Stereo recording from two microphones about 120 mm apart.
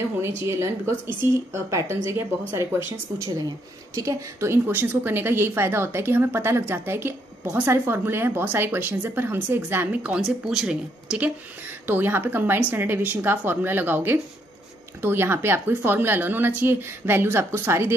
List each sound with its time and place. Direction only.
0.2 s a woman's voice: 25° right (ahead or behind)